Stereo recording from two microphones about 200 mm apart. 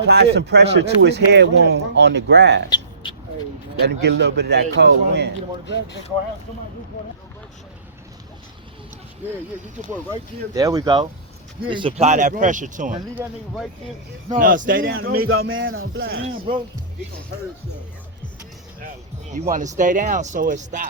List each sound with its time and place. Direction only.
0.3 s speech: 55° right (ahead or behind)
2.6 s vehicle: 25° left (ahead or behind)
3.8 s speech: 60° right (ahead or behind)
10.5 s speech: 15° right (ahead or behind); by 12.9 s 40° right (ahead or behind)
13.2 s speech: 15° right (ahead or behind)
14.3 s speech: 45° right (ahead or behind)
14.9 s speech: 90° right
16.0 s speech: 50° right (ahead or behind)
19.3 s speech: 40° right (ahead or behind)